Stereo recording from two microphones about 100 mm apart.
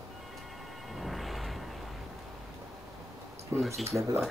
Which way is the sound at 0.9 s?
Centre (ahead or behind).